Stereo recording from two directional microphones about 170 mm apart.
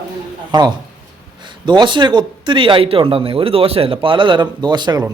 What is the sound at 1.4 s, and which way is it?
Speech, 25° right (ahead or behind).